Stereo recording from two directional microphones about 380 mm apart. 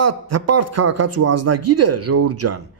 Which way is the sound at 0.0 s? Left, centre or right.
Right.